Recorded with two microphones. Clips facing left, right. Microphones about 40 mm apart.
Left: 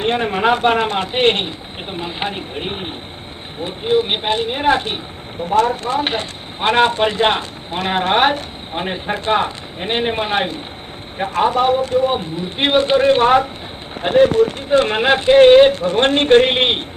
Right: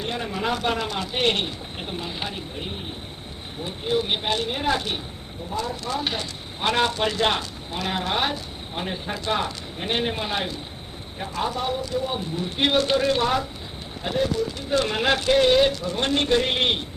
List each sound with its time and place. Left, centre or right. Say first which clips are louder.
0.0 s a man's voice: left 10 dB; left
3.6 s a man's voice: left 8 dB; left
5.5 s speech: left 14 dB; left
5.8 s a man's voice: left 8 dB; left